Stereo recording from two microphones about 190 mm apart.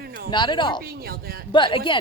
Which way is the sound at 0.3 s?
25° left (ahead or behind).